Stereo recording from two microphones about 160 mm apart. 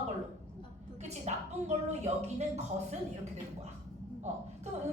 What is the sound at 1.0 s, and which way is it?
A woman's voice, 45° right (ahead or behind).